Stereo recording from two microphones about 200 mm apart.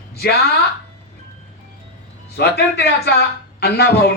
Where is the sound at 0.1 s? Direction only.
55° left (ahead or behind).